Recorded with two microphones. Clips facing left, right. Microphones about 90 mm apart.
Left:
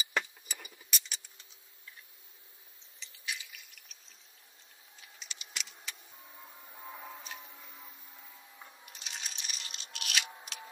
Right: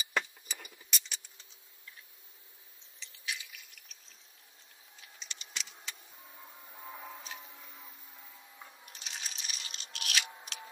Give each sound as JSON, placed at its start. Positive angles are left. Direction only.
{"t": 0.1, "sound": "vehicle", "side_deg": 5}
{"t": 3.0, "sound": "drip", "side_deg": 0}
{"t": 5.0, "sound": "a sound", "side_deg": 5}